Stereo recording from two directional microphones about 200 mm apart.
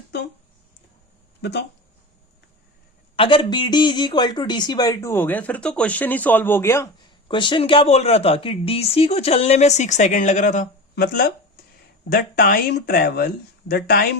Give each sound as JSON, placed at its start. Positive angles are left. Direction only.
{"t": 1.4, "sound": "speech", "side_deg": 60}
{"t": 3.2, "sound": "speech", "side_deg": 25}
{"t": 7.3, "sound": "speech", "side_deg": 25}